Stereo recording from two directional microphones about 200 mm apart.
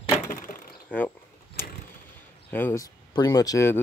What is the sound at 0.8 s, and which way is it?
Speech, 10° left (ahead or behind).